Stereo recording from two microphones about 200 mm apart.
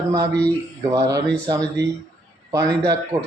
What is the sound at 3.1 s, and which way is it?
Speech, 15° right (ahead or behind).